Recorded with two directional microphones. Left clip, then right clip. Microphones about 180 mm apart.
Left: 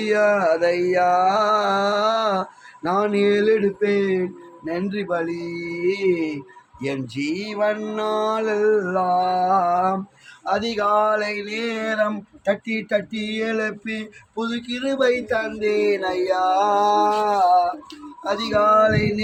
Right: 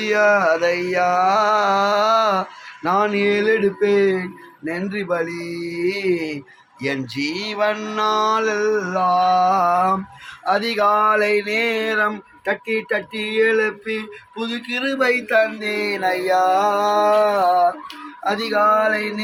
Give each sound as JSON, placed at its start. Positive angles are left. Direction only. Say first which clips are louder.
{"t": 0.0, "sound": "mantra", "louder": "right 2 dB", "side_deg": 10}
{"t": 3.8, "sound": "speech", "louder": "right 3 dB", "side_deg": -35}
{"t": 7.2, "sound": "mantra", "louder": "right 1 dB", "side_deg": 0}
{"t": 10.4, "sound": "a sound", "louder": "right 4 dB", "side_deg": -40}